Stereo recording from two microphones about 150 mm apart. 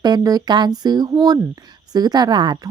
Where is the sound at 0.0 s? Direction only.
25° right (ahead or behind).